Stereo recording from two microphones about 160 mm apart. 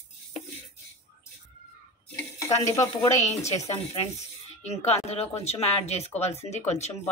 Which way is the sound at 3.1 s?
45° left (ahead or behind).